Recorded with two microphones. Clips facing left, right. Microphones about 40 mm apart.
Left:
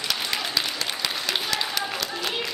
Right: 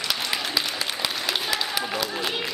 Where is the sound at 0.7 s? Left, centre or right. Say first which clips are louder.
Right 1 dB; centre.